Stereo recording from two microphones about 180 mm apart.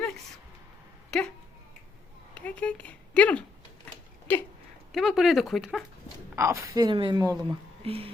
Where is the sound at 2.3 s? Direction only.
5° left (ahead or behind).